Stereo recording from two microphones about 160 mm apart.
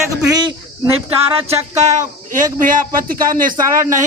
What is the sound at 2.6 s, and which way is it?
Speech, 60° right (ahead or behind).